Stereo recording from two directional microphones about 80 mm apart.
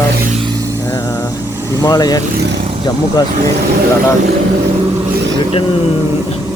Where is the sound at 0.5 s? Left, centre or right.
Right.